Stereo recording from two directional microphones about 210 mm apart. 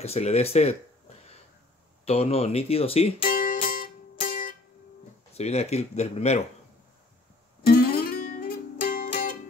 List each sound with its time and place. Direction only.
0.0 s speech: 30° left (ahead or behind)
2.0 s speech: 30° left (ahead or behind)
3.3 s music: 40° left (ahead or behind)
5.3 s speech: 30° left (ahead or behind)
7.6 s music: 45° left (ahead or behind)